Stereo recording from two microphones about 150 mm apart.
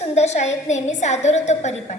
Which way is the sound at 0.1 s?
50° left (ahead or behind).